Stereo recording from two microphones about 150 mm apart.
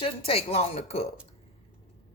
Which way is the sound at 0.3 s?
40° left (ahead or behind).